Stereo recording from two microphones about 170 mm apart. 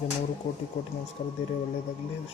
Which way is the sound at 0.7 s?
70° left (ahead or behind).